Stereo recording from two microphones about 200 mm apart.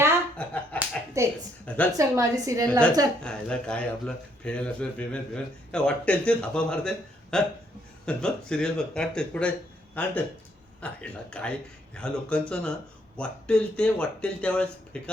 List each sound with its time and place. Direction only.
0.3 s slap: 5° left (ahead or behind)
1.2 s a woman's voice: 15° right (ahead or behind)
1.6 s a woman's voice: 5° left (ahead or behind)
1.9 s a woman's voice: 15° right (ahead or behind)
3.2 s speech: 5° left (ahead or behind)